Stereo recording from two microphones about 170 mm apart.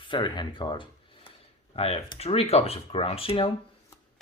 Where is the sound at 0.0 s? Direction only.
30° left (ahead or behind).